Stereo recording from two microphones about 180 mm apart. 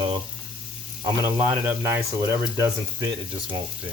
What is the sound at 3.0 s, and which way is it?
Speech, 25° right (ahead or behind).